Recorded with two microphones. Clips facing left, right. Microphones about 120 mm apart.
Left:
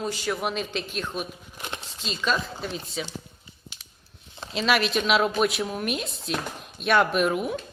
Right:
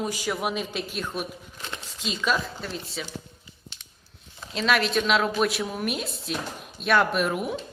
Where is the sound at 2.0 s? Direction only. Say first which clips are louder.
Right 1 dB; 10° right (ahead or behind).